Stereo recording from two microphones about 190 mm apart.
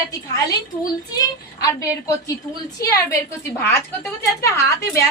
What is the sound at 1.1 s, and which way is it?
A woman's voice, 15° left (ahead or behind).